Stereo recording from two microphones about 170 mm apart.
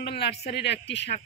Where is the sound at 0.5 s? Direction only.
90° left.